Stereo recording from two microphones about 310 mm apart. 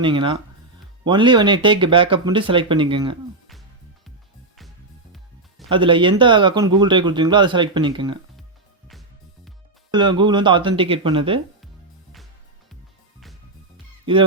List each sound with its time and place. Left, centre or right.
0.0 s speech: centre
5.6 s speech: centre
8.9 s music: centre
9.9 s speech: centre
14.0 s music: centre